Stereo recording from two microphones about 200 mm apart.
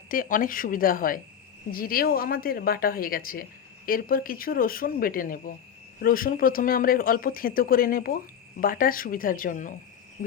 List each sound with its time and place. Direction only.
0.1 s speech: 45° left (ahead or behind)